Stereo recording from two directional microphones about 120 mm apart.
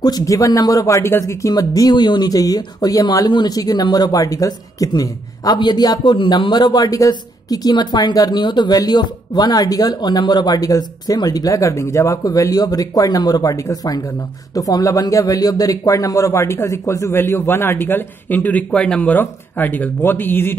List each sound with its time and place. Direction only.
0.0 s speech: 30° left (ahead or behind)